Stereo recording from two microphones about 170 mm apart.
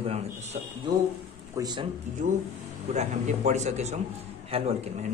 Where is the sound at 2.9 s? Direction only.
45° right (ahead or behind).